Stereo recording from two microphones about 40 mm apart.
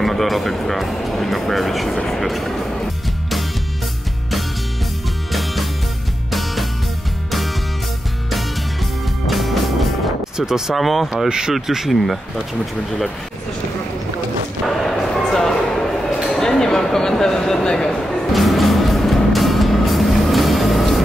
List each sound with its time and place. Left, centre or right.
0.0 s speech: centre
6.3 s music: centre
9.3 s music: centre
10.3 s speech: centre
10.7 s speech: centre
11.2 s speech: centre
14.7 s a sound: centre
18.3 s music: centre